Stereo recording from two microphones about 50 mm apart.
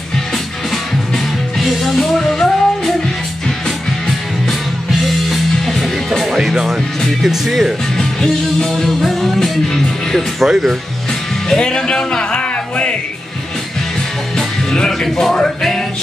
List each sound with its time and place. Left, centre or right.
0.7 s music: centre
5.0 s music: centre
7.2 s speech: centre
7.9 s music: centre
10.5 s speech: centre
11.4 s music: centre
14.3 s music: centre